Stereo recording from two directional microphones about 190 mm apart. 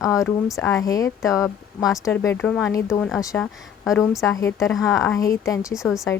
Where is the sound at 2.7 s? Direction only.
15° left (ahead or behind).